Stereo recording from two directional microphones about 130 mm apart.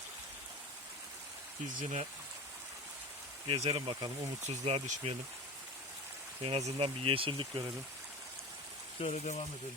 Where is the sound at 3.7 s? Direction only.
35° right (ahead or behind).